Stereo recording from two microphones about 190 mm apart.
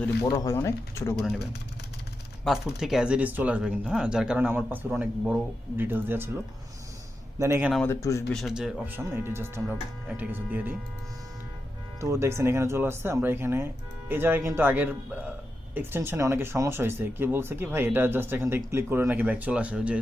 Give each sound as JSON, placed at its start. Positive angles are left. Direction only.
{"t": 0.3, "sound": "speech", "side_deg": 20}
{"t": 2.4, "sound": "speech", "side_deg": 0}
{"t": 7.9, "sound": "speech", "side_deg": 15}
{"t": 8.3, "sound": "speech", "side_deg": 0}
{"t": 11.9, "sound": "speech", "side_deg": -15}